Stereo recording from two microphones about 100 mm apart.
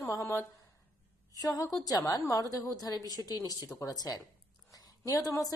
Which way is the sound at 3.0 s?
40° right (ahead or behind).